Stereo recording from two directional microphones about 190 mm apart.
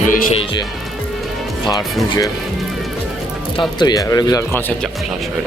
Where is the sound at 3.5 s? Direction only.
20° left (ahead or behind).